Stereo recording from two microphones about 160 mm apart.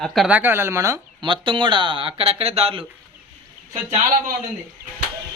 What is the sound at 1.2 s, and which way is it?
Speech, 30° right (ahead or behind).